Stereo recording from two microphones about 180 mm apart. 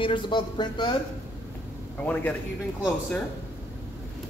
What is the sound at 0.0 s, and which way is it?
Speech, 25° left (ahead or behind).